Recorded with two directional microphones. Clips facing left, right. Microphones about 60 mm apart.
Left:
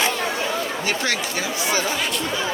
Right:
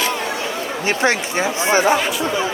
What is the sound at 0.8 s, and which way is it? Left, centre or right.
Speech, right.